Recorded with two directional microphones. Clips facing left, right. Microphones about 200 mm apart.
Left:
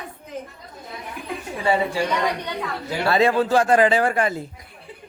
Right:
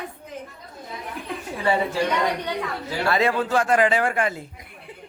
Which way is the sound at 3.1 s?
30° left (ahead or behind).